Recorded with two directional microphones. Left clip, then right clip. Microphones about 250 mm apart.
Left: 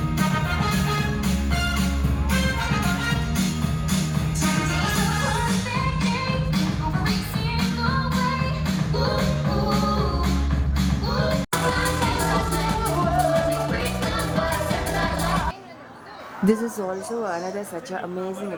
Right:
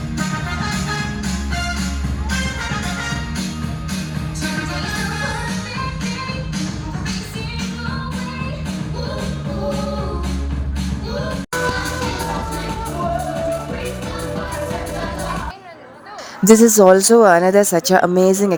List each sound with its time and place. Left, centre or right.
16.5 s a woman's voice: right